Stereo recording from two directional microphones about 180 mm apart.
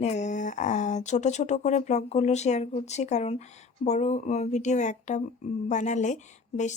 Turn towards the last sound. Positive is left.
turn(degrees=40)  # may be behind; listen again after turning